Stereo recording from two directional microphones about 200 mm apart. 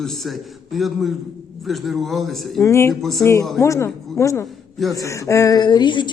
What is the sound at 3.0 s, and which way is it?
Speech, centre (ahead or behind).